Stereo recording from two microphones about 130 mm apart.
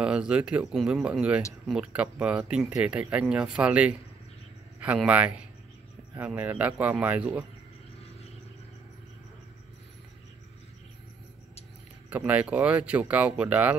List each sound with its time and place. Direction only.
0.0 s speech: 10° right (ahead or behind)
12.1 s speech: 10° right (ahead or behind)